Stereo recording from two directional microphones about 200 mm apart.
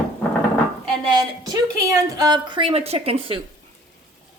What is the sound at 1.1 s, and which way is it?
Speech, 20° right (ahead or behind).